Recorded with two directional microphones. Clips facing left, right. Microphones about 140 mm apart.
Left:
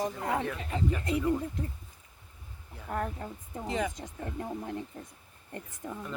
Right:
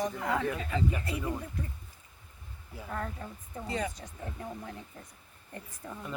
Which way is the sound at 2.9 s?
20° left (ahead or behind).